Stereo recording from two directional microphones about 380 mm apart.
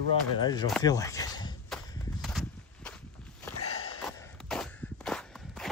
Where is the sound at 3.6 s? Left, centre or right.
Left.